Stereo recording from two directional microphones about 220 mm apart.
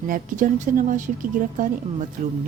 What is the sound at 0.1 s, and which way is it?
Speech, 35° right (ahead or behind).